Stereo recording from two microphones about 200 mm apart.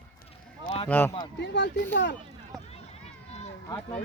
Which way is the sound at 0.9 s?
10° left (ahead or behind).